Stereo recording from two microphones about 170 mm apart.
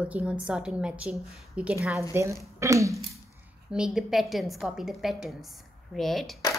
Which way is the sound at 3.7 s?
5° right (ahead or behind).